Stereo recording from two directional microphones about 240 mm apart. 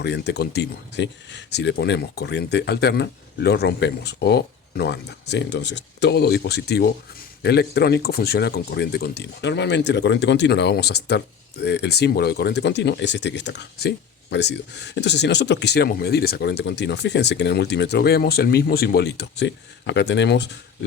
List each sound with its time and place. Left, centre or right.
0.0 s speech: left